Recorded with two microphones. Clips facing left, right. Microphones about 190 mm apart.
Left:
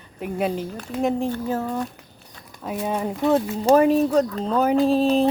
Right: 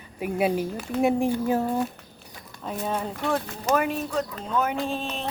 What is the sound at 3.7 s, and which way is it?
Speech, 35° left (ahead or behind).